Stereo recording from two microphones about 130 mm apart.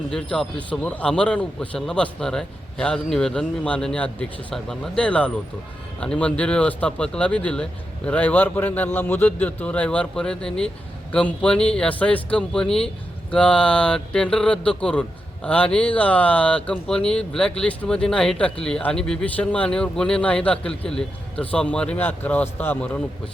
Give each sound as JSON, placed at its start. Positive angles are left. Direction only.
{"t": 0.1, "sound": "speech", "side_deg": 5}